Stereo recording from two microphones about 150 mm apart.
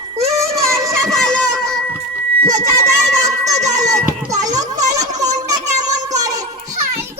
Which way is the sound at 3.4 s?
50° right (ahead or behind).